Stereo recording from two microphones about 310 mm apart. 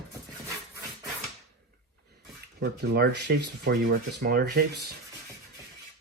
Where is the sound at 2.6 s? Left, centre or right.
Right.